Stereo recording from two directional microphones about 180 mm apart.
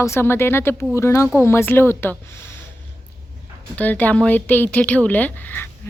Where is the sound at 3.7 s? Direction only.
10° left (ahead or behind).